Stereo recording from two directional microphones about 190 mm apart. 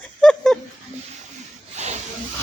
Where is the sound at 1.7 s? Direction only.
35° right (ahead or behind).